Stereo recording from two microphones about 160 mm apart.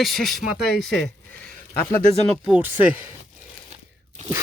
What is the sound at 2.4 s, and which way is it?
Speech, 10° right (ahead or behind).